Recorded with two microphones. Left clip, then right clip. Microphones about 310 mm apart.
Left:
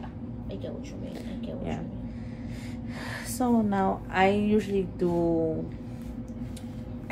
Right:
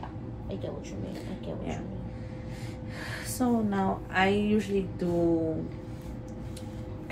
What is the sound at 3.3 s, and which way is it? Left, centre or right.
A woman's voice, left.